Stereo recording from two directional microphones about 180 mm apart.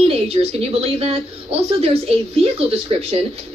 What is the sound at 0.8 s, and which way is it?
Speech, 35° right (ahead or behind).